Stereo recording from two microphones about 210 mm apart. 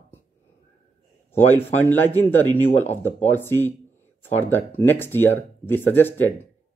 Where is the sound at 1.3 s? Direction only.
10° left (ahead or behind).